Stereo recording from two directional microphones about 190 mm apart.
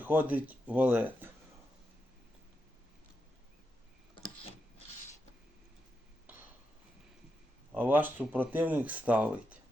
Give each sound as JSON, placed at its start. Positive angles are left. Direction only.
{"t": 0.0, "sound": "speech", "side_deg": -10}
{"t": 6.2, "sound": "a sound", "side_deg": -10}
{"t": 7.7, "sound": "speech", "side_deg": -10}